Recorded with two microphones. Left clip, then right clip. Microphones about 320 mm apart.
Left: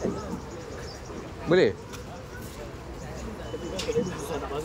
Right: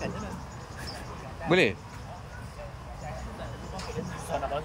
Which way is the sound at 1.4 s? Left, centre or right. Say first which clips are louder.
Left 2 dB; centre.